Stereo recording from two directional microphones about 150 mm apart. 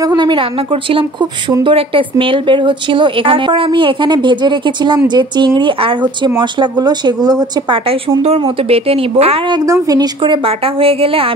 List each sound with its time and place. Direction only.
0.0 s a woman's voice: 30° right (ahead or behind)
1.6 s a woman's voice: 35° right (ahead or behind)
8.2 s a woman's voice: 40° right (ahead or behind)
9.7 s a woman's voice: 25° right (ahead or behind)